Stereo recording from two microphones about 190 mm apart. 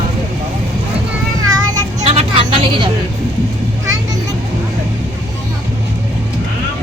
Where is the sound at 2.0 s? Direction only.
30° right (ahead or behind).